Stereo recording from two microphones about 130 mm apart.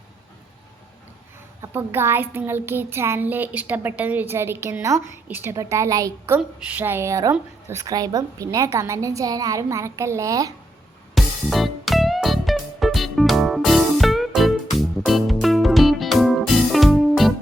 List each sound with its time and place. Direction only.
1.6 s a child's voice: 15° right (ahead or behind)
11.1 s music: centre (ahead or behind)